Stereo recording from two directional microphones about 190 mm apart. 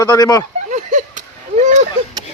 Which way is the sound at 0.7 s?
40° right (ahead or behind).